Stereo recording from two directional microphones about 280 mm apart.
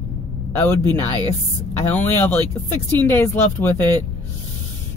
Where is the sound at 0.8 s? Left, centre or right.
Centre.